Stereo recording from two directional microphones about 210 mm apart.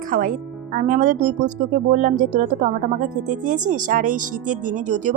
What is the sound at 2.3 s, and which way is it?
A woman's voice, 40° right (ahead or behind).